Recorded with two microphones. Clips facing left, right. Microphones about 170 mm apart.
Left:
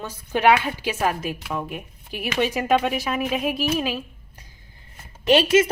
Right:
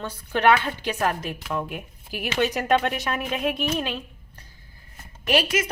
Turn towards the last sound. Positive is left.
turn(degrees=25)  # may be behind; listen again after turning